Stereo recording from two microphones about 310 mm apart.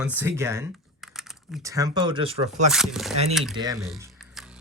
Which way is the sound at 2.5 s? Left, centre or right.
Centre.